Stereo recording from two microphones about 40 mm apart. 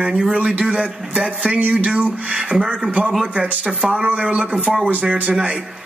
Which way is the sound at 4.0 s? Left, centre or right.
Right.